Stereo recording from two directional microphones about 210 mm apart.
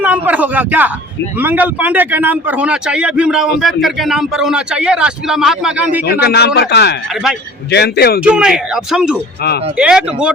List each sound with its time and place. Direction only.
0.0 s a man's voice: 5° right (ahead or behind)
6.1 s speech: 50° left (ahead or behind)
7.1 s a man's voice: centre (ahead or behind)
7.7 s speech: 50° left (ahead or behind)
8.2 s a man's voice: 5° right (ahead or behind)